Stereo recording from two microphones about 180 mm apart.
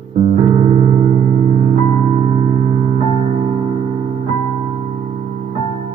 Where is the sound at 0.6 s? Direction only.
40° right (ahead or behind).